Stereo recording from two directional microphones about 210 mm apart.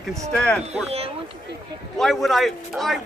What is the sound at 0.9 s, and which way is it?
Speech, 30° right (ahead or behind).